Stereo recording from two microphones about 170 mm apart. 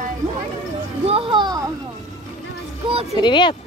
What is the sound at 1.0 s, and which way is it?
Speech, 35° right (ahead or behind).